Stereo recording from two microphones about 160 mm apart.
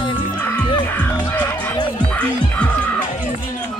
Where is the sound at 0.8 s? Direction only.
10° left (ahead or behind).